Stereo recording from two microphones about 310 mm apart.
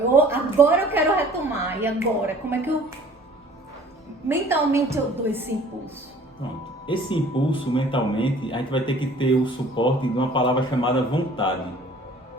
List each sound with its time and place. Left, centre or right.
0.1 s a sound: centre
1.6 s a woman's voice: centre
4.3 s a woman's voice: centre
6.8 s speech: centre